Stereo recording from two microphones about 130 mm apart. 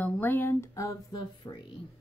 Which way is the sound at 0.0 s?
15° left (ahead or behind).